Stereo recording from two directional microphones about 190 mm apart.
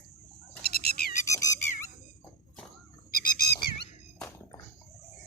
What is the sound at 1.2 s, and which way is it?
Squeak, 15° left (ahead or behind).